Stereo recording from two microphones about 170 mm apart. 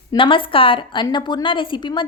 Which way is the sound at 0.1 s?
30° left (ahead or behind).